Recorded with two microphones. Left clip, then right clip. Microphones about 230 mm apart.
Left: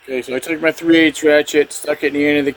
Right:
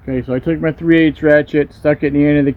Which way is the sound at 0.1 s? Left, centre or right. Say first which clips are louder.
Right 2 dB; centre.